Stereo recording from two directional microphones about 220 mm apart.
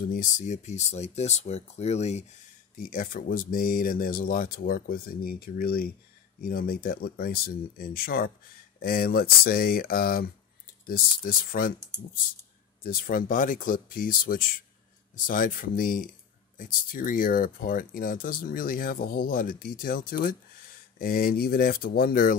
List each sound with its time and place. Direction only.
0.1 s speech: 35° left (ahead or behind)
12.8 s speech: 40° left (ahead or behind)